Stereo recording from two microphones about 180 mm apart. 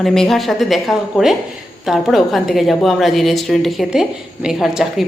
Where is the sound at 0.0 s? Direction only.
Centre (ahead or behind).